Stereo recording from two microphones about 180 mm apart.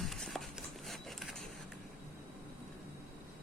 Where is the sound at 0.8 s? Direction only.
Centre (ahead or behind).